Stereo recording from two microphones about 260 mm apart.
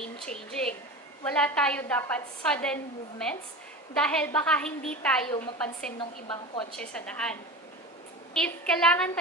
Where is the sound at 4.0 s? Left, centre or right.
Centre.